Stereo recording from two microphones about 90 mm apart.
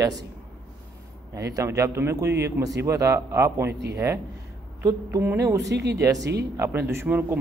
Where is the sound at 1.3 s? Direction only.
40° right (ahead or behind).